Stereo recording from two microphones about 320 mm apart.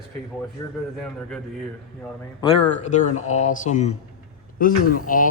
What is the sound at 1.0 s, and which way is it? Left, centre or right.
Speech, centre.